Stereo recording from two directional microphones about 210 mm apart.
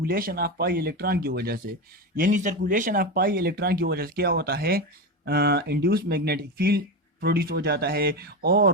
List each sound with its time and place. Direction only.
0.0 s speech: 45° right (ahead or behind)